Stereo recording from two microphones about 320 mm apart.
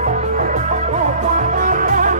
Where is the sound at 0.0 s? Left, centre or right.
Right.